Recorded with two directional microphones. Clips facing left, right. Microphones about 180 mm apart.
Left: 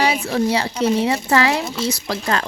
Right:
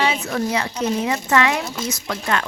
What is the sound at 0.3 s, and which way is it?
Speech, 30° left (ahead or behind).